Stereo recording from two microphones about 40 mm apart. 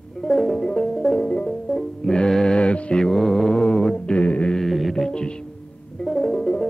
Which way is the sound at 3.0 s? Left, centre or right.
Centre.